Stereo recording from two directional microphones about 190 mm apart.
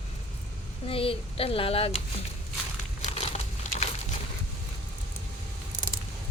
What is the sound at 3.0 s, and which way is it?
Crumpling, 35° left (ahead or behind).